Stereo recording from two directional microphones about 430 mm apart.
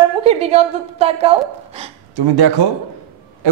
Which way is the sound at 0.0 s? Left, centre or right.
Centre.